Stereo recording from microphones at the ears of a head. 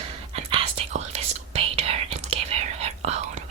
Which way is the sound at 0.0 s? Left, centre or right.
Right.